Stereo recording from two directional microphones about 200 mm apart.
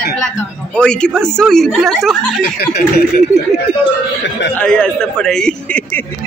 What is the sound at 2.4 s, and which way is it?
Speech, 55° left (ahead or behind).